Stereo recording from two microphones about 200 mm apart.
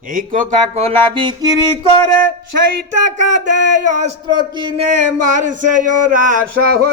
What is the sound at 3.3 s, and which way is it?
Speech, 40° right (ahead or behind).